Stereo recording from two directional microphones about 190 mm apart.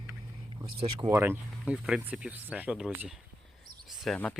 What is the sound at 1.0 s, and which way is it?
Speech, 15° right (ahead or behind).